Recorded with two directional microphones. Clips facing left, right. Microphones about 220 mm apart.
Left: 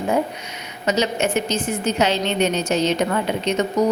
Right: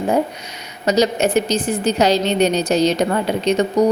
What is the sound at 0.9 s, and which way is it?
A woman's voice, 35° right (ahead or behind).